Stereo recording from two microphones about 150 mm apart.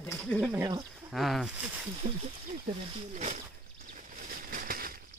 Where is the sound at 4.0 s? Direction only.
70° right (ahead or behind).